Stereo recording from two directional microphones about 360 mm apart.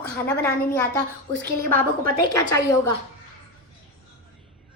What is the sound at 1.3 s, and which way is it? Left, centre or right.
Speech, right.